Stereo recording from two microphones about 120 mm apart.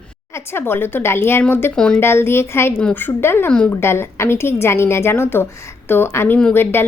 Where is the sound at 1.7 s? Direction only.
5° left (ahead or behind).